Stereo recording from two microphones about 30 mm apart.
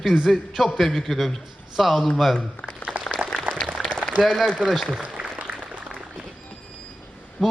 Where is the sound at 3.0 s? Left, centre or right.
Right.